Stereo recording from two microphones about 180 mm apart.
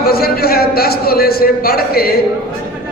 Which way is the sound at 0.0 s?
60° left (ahead or behind).